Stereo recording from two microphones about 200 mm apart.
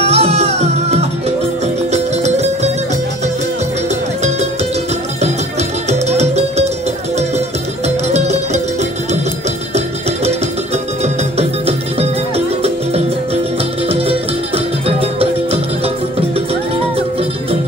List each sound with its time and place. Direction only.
0.0 s music: 30° right (ahead or behind)
5.9 s music: 35° right (ahead or behind)
11.3 s music: 30° right (ahead or behind)
14.9 s music: 30° right (ahead or behind)